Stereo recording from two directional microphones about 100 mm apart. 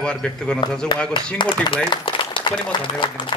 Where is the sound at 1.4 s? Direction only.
50° left (ahead or behind).